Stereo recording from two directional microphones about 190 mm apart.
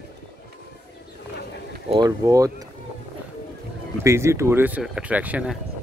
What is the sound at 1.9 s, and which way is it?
Speech, 20° right (ahead or behind).